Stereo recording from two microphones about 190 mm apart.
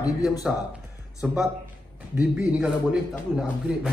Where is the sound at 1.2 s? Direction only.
Centre (ahead or behind).